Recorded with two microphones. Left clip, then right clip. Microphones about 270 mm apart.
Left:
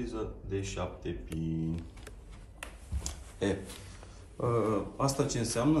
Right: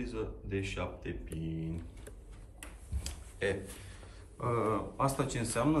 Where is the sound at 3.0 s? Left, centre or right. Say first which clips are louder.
Left 1 dB; centre.